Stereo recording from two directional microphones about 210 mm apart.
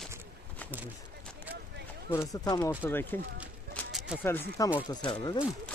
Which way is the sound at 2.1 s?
15° left (ahead or behind).